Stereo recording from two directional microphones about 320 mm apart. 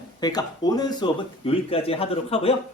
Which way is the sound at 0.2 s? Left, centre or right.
Centre.